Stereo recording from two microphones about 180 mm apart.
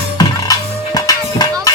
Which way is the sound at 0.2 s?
20° left (ahead or behind).